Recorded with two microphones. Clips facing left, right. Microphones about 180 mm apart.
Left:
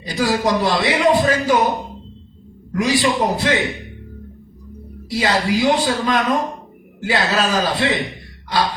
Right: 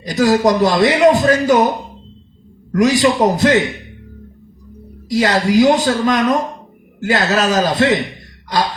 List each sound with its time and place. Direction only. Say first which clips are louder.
0.0 s a man's voice: right 6 dB; 45° right (ahead or behind)
2.7 s a man's voice: right 5 dB; 45° right (ahead or behind)
5.1 s a man's voice: right 5 dB; 45° right (ahead or behind)